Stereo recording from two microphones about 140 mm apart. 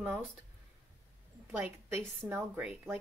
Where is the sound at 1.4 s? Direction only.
20° right (ahead or behind).